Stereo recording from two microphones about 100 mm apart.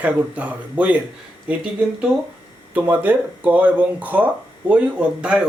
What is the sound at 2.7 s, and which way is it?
Speech, 15° right (ahead or behind).